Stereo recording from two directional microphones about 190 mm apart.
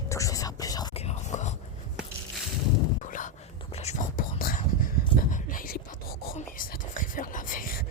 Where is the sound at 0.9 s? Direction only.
35° left (ahead or behind).